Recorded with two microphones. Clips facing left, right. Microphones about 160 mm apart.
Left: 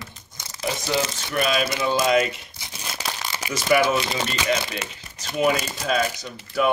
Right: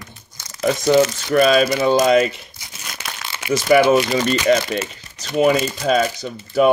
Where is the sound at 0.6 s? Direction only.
50° right (ahead or behind).